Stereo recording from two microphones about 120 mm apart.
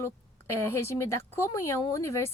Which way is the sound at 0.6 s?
20° left (ahead or behind).